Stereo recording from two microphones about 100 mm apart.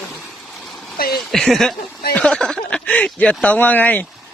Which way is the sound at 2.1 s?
5° left (ahead or behind).